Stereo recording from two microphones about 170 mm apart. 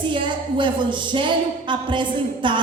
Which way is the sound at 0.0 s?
30° right (ahead or behind).